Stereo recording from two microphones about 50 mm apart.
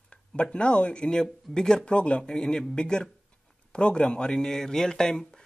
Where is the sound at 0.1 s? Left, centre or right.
Left.